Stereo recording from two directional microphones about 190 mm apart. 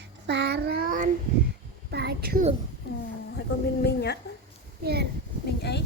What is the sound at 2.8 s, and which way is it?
Speech, 55° left (ahead or behind).